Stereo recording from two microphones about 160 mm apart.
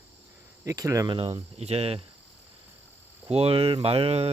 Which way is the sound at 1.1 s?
35° right (ahead or behind).